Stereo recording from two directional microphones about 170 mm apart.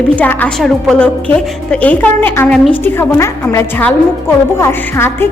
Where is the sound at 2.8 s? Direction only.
15° left (ahead or behind).